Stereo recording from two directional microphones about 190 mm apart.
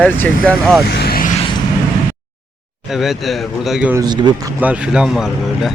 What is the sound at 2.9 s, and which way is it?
Speech, centre (ahead or behind).